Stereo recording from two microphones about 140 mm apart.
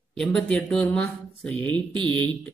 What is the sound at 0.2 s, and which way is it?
Speech, 5° left (ahead or behind).